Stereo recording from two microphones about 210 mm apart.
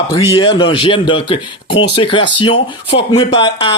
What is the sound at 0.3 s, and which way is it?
A man's voice, 25° left (ahead or behind).